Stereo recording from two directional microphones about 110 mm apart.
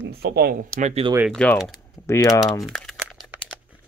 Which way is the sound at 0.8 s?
90° right.